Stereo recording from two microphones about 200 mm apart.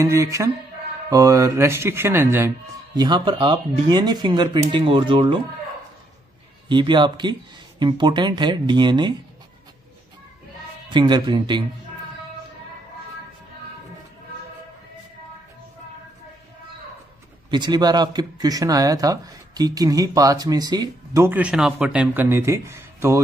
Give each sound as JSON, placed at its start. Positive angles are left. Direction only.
{"t": 0.0, "sound": "speech", "side_deg": -15}
{"t": 3.0, "sound": "speech", "side_deg": -25}
{"t": 6.7, "sound": "speech", "side_deg": -25}
{"t": 10.9, "sound": "speech", "side_deg": -20}
{"t": 17.5, "sound": "speech", "side_deg": -20}